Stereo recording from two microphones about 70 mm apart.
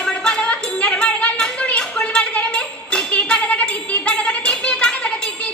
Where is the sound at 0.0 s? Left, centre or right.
Centre.